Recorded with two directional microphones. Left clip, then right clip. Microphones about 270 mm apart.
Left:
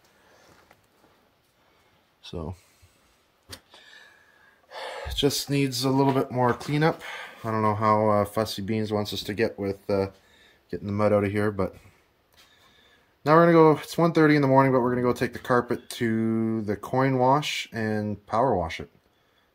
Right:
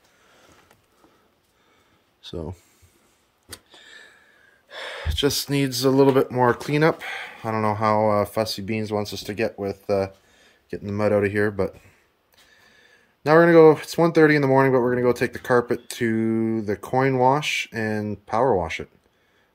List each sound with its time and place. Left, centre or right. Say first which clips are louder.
2.2 s speech: right 3 dB; centre
3.4 s a sound: right 2 dB; centre
4.6 s speech: right 2 dB; centre